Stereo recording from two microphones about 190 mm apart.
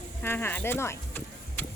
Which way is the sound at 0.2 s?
10° left (ahead or behind).